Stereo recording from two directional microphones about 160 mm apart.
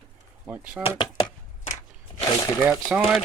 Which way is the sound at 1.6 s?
50° left (ahead or behind).